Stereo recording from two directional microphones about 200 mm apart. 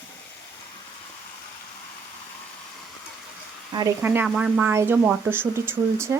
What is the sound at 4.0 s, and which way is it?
Speech, 10° right (ahead or behind).